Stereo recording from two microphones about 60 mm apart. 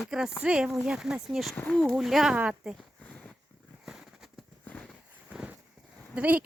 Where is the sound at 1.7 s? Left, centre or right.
Centre.